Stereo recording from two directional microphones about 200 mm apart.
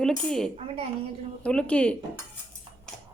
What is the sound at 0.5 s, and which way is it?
Speech, 30° right (ahead or behind).